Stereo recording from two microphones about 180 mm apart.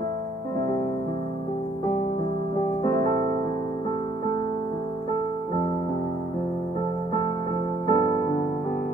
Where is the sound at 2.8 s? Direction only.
25° left (ahead or behind).